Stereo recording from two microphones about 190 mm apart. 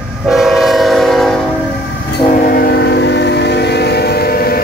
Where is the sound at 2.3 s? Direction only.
50° left (ahead or behind).